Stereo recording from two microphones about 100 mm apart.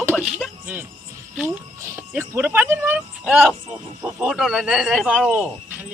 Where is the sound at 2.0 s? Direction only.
20° right (ahead or behind).